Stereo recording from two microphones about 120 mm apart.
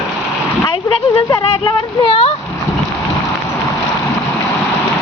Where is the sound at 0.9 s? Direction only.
45° left (ahead or behind).